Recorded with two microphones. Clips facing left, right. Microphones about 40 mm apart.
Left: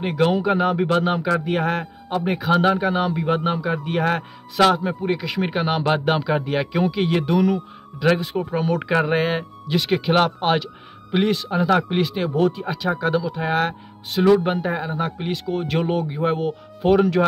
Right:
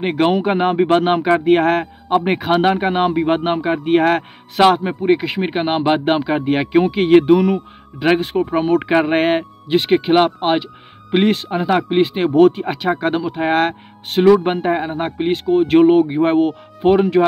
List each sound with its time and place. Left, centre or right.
0.0 s a man's voice: right
11.1 s speech: right
11.5 s speech: right
12.4 s a man's voice: right
16.8 s speech: right